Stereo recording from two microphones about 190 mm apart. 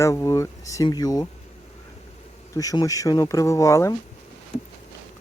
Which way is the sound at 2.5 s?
20° left (ahead or behind).